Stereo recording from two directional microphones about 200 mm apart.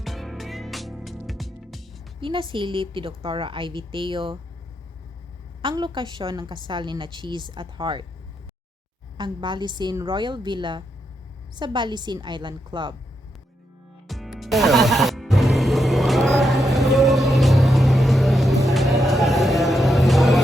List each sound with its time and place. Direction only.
0.0 s music: centre (ahead or behind)
2.2 s a woman's voice: 25° right (ahead or behind)
5.6 s a woman's voice: 25° right (ahead or behind)
9.1 s a woman's voice: 25° right (ahead or behind)
14.1 s music: centre (ahead or behind)